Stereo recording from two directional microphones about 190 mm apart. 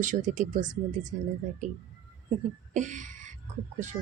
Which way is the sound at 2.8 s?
40° right (ahead or behind).